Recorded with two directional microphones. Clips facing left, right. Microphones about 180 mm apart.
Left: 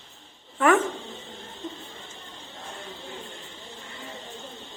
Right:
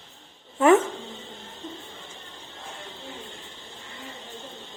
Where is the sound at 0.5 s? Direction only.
25° right (ahead or behind).